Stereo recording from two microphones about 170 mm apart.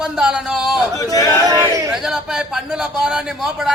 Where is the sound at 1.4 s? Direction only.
20° right (ahead or behind).